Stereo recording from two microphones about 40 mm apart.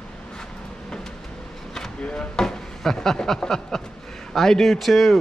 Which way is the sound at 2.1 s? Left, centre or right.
Centre.